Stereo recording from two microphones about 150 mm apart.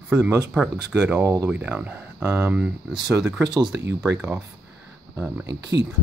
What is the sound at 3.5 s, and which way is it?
Speech, 25° right (ahead or behind).